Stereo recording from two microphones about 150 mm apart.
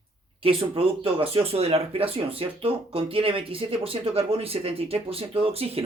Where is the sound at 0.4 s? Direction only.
40° right (ahead or behind).